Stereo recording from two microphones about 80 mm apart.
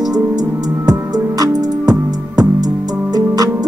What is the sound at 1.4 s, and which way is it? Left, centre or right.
Music, right.